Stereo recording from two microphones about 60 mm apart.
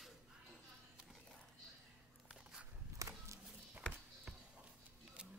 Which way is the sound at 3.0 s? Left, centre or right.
Right.